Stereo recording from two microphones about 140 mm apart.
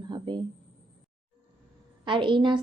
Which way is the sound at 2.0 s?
35° right (ahead or behind).